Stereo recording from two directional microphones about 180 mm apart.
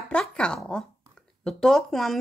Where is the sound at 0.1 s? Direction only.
5° left (ahead or behind).